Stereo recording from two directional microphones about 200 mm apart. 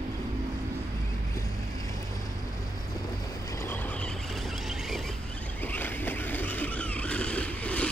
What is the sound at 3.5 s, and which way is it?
Vehicle, 10° left (ahead or behind).